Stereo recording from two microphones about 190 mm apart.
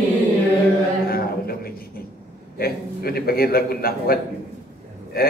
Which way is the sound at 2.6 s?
50° left (ahead or behind).